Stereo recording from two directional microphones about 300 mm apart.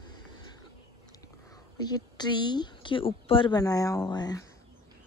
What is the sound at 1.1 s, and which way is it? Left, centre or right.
Speech, centre.